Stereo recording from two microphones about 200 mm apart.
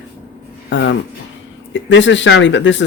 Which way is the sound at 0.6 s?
65° left (ahead or behind).